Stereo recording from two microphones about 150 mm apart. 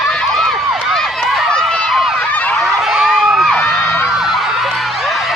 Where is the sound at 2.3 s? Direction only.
10° left (ahead or behind).